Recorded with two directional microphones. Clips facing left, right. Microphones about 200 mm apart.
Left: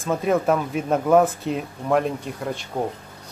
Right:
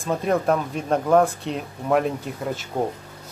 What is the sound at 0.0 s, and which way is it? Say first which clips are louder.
Speech: left 1 dB; centre (ahead or behind).